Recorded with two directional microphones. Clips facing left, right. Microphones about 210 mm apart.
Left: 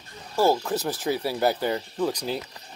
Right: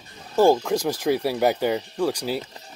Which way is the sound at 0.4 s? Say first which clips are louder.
Right 4 dB; 15° right (ahead or behind).